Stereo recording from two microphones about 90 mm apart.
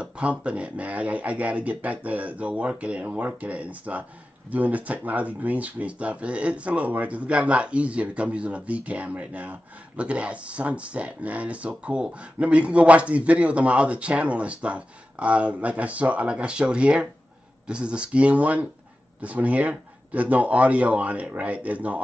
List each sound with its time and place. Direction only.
0.0 s speech: 15° right (ahead or behind)